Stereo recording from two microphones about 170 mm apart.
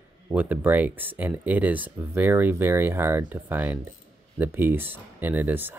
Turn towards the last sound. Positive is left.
turn(degrees=-10)  # may be behind; listen again after turning